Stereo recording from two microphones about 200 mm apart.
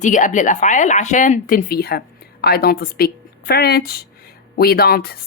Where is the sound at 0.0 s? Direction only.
40° left (ahead or behind).